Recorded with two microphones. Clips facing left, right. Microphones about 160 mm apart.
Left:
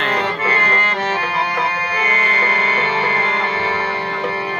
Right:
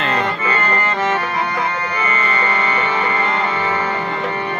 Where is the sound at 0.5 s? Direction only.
70° left (ahead or behind).